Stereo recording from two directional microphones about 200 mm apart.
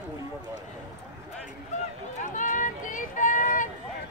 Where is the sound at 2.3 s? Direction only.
40° left (ahead or behind).